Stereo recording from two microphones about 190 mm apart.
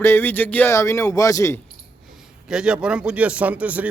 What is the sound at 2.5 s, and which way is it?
Speech, 5° right (ahead or behind).